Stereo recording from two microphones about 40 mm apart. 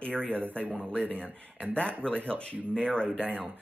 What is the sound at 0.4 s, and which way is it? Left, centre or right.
Speech, right.